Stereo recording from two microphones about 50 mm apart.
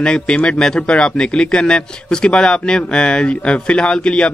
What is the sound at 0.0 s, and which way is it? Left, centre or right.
Speech, centre.